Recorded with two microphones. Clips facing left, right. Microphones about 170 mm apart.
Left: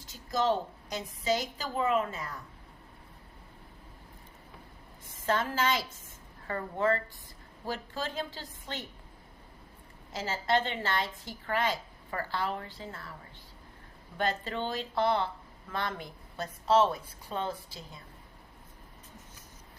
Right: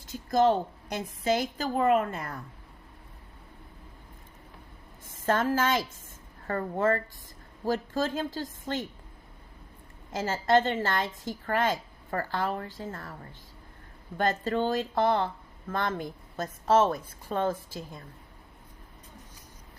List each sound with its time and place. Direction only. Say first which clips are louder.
0.1 s a woman's voice: right 5 dB; 55° right (ahead or behind)
5.2 s a woman's voice: right 4 dB; 50° right (ahead or behind)
10.1 s a woman's voice: right 5 dB; 50° right (ahead or behind)
14.2 s a woman's voice: right 5 dB; 45° right (ahead or behind)